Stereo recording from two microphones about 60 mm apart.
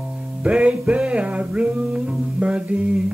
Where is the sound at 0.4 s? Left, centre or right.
Centre.